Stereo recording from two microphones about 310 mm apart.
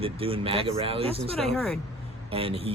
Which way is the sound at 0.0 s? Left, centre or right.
Centre.